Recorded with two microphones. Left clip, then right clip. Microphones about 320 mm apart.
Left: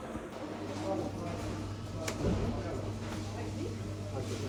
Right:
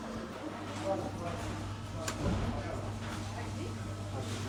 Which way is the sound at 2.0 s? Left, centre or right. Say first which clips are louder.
Left 2 dB; centre.